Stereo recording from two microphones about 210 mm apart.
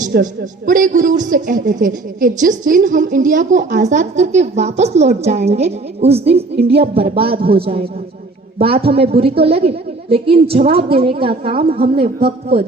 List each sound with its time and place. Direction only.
0.0 s a woman's voice: 40° right (ahead or behind)
6.6 s speech: 50° right (ahead or behind)
7.1 s a woman's voice: 25° right (ahead or behind)